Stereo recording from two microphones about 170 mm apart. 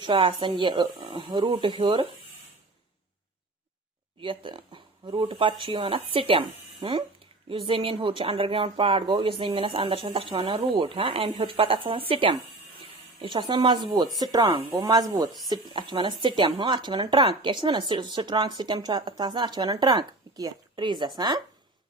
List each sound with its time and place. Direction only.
0.0 s speech: 30° right (ahead or behind)
4.2 s speech: 30° right (ahead or behind)